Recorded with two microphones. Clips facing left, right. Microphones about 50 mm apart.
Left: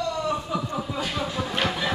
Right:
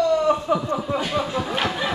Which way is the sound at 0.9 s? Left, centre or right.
Right.